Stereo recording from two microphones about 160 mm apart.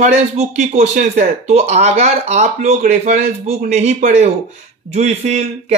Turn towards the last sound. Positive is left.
turn(degrees=-45)  # may be behind; listen again after turning